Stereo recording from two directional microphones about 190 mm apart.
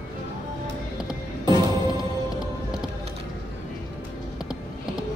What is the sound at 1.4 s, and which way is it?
Music, 25° right (ahead or behind).